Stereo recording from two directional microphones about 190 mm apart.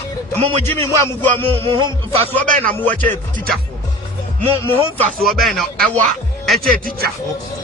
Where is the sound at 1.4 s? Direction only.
25° right (ahead or behind).